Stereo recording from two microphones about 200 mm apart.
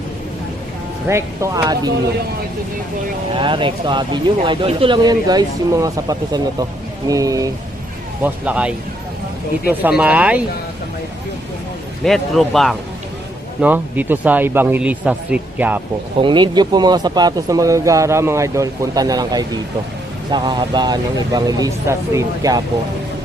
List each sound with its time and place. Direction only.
1.0 s speech: 15° right (ahead or behind)
3.3 s speech: 25° right (ahead or behind)
8.2 s speech: 5° right (ahead or behind)
12.0 s speech: centre (ahead or behind)
16.1 s speech: 25° right (ahead or behind)